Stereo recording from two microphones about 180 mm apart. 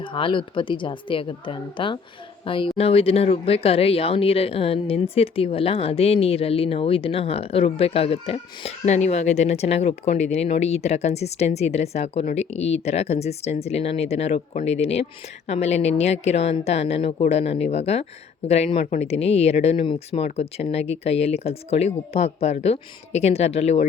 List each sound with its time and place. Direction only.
0.0 s a woman's voice: 30° left (ahead or behind)